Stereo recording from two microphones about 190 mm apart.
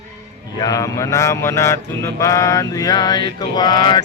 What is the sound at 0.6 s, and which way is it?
Speech, 20° left (ahead or behind).